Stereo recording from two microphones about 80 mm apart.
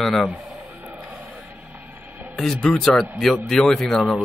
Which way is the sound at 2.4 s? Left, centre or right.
Centre.